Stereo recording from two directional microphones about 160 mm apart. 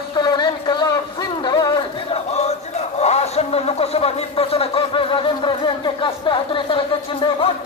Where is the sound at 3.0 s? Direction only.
40° left (ahead or behind).